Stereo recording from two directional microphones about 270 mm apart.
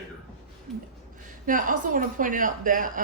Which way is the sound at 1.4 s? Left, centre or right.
Right.